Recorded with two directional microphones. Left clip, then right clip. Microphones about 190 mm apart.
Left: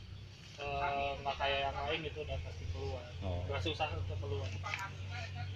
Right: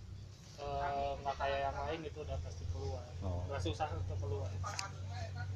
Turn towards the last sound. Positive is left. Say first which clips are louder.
# left 2 dB
turn(degrees=-5)  # may be behind; listen again after turning